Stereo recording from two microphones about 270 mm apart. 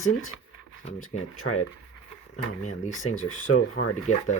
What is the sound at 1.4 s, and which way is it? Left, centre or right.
Speech, left.